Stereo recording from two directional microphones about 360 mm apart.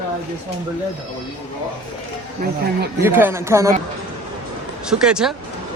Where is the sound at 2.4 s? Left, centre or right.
Right.